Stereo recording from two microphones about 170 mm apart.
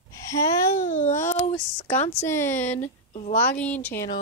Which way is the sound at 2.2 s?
15° left (ahead or behind).